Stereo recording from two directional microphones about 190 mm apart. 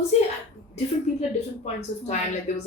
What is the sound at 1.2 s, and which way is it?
Speech, 35° left (ahead or behind).